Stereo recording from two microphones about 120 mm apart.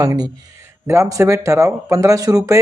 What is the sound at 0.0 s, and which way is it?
Speech, 30° right (ahead or behind).